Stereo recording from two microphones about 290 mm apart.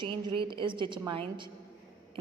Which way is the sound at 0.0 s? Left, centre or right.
Centre.